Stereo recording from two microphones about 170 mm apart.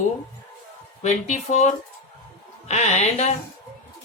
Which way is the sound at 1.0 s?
45° left (ahead or behind).